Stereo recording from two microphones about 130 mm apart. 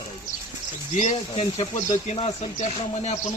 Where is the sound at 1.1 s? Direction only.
55° left (ahead or behind).